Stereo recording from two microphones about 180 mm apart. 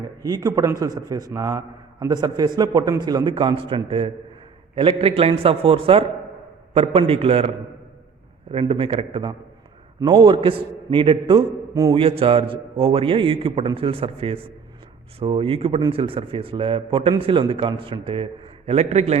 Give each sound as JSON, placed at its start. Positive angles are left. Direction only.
{"t": 0.2, "sound": "a man's voice", "side_deg": -20}
{"t": 8.5, "sound": "a man's voice", "side_deg": -30}
{"t": 11.9, "sound": "a man's voice", "side_deg": -30}